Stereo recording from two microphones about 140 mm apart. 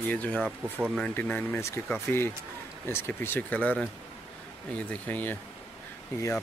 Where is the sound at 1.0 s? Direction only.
10° left (ahead or behind).